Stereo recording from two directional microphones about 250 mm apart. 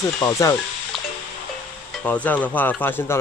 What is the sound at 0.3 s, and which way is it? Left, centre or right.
Speech, centre.